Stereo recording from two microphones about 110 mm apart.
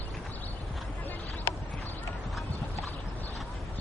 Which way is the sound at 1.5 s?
25° left (ahead or behind).